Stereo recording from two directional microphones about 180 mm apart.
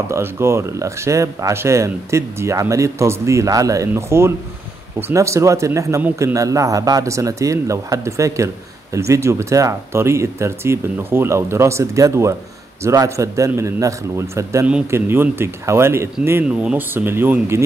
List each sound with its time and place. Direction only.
0.1 s a man's voice: 15° right (ahead or behind)